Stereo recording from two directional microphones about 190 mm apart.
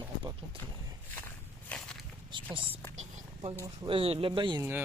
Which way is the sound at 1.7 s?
5° left (ahead or behind).